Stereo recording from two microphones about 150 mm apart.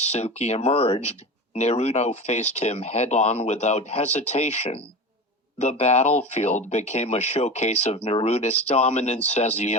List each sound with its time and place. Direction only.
0.0 s speech: 45° left (ahead or behind)